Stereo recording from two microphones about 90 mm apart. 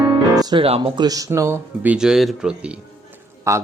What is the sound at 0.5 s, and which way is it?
Speech, 75° right (ahead or behind).